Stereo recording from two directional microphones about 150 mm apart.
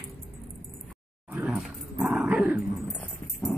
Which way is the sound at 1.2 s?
5° right (ahead or behind).